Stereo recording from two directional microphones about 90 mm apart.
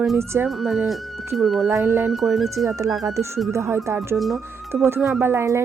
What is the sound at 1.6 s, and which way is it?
Speech, 30° right (ahead or behind).